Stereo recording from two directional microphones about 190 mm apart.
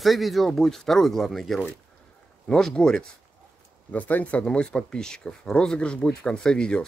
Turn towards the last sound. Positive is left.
turn(degrees=5)  # may be behind; listen again after turning